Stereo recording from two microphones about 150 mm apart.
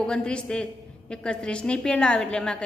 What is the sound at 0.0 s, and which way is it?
A woman's voice, 5° left (ahead or behind).